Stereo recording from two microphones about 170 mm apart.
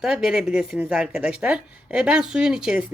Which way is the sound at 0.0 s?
5° right (ahead or behind).